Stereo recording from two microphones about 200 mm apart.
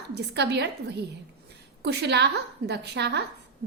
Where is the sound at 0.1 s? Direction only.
55° right (ahead or behind).